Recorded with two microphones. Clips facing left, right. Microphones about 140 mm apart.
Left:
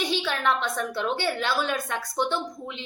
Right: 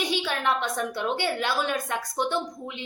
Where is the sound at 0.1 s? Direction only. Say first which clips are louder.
Left 1 dB; 15° right (ahead or behind).